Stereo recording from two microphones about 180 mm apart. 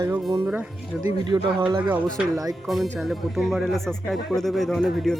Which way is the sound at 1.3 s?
25° right (ahead or behind).